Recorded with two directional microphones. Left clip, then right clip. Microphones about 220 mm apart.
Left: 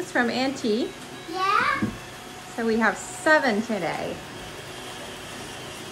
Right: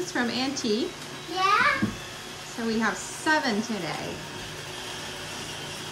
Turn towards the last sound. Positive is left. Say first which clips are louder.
# left 4 dB
turn(degrees=-5)  # may be behind; listen again after turning